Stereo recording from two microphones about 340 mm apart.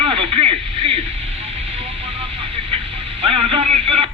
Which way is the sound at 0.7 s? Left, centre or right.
Right.